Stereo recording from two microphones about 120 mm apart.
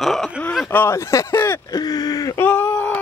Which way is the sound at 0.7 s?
20° left (ahead or behind).